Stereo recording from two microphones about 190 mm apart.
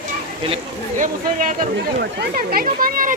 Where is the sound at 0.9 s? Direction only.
45° right (ahead or behind).